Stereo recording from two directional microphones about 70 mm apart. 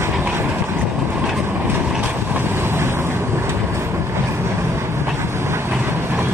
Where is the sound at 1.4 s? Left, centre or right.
Right.